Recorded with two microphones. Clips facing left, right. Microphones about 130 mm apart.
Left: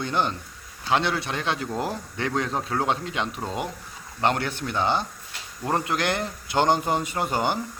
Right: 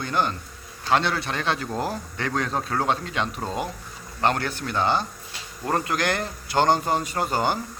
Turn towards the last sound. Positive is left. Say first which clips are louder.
# right 1 dB
turn(degrees=20)  # may be behind; listen again after turning